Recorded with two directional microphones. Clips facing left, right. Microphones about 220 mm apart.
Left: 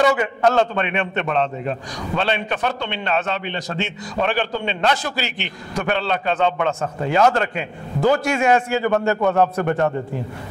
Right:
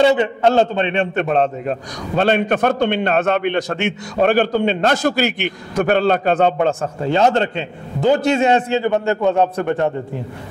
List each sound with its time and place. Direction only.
0.0 s a man's voice: 25° right (ahead or behind)
1.1 s a man's voice: 45° right (ahead or behind); by 9.9 s 20° right (ahead or behind)